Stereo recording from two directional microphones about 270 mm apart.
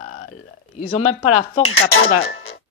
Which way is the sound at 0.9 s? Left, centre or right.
Left.